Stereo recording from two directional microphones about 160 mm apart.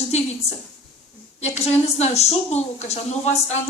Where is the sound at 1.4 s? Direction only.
45° left (ahead or behind).